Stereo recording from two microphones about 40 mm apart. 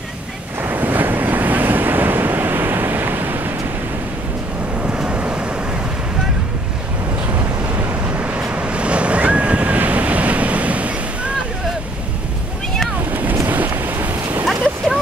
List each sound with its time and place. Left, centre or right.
0.6 s waves: right
4.9 s vehicle: right
8.2 s waves: right
13.1 s boat: right
13.5 s a sound: right
14.4 s a sound: centre